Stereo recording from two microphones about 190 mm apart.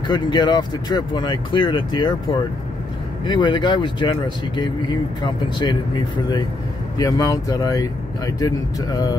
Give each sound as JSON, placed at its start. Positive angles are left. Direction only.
{"t": 0.1, "sound": "speech", "side_deg": 20}
{"t": 3.3, "sound": "speech", "side_deg": 25}
{"t": 7.0, "sound": "speech", "side_deg": 20}